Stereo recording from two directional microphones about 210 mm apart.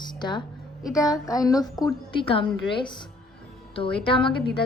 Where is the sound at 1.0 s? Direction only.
15° left (ahead or behind).